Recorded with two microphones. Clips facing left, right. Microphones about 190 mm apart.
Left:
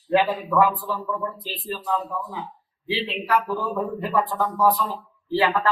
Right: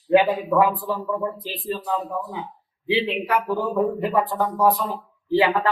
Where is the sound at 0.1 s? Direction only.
20° right (ahead or behind).